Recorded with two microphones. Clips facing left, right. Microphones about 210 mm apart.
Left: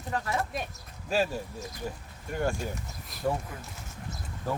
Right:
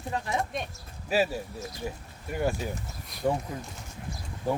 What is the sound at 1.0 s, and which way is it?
Speech, 10° right (ahead or behind).